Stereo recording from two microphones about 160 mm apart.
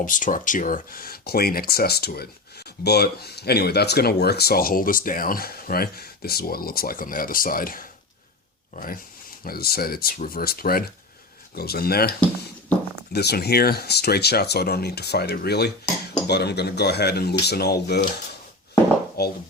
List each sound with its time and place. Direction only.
0.0 s speech: 55° left (ahead or behind); by 12.1 s 75° left (ahead or behind)
13.1 s speech: 90° left
19.2 s speech: 85° left